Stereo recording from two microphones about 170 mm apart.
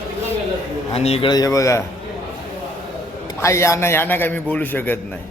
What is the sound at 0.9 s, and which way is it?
Speech, 35° left (ahead or behind).